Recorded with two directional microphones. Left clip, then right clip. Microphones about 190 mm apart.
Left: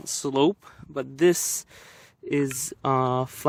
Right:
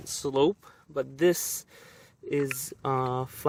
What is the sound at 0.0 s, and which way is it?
Speech, 45° left (ahead or behind).